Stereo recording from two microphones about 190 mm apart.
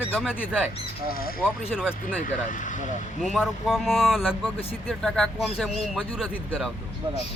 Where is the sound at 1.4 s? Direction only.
5° right (ahead or behind).